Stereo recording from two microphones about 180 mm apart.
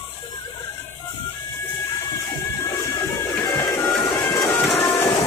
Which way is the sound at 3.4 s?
20° left (ahead or behind).